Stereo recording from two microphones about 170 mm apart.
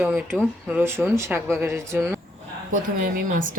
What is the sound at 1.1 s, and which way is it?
Speech, 15° right (ahead or behind).